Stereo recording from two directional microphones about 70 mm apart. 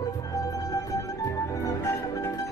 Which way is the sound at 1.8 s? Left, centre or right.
Left.